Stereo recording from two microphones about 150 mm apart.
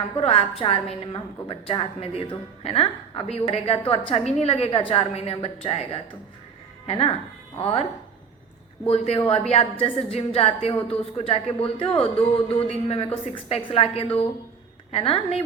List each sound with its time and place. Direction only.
0.2 s a woman's voice: 40° left (ahead or behind)
8.9 s a woman's voice: 40° left (ahead or behind)